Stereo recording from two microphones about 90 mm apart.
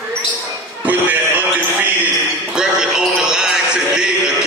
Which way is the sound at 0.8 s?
20° right (ahead or behind).